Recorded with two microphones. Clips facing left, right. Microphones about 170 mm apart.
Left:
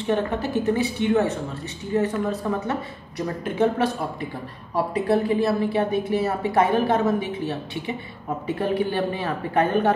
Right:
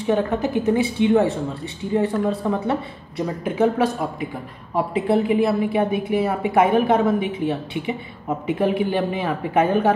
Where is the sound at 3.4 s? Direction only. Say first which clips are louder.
Right 2 dB; 10° right (ahead or behind).